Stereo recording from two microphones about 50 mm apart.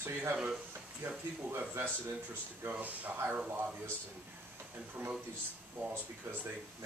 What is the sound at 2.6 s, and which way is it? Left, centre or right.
Speech, right.